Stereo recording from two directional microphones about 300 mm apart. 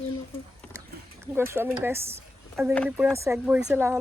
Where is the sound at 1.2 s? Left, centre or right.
Centre.